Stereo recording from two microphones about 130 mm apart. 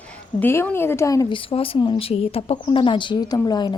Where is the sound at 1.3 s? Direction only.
40° left (ahead or behind).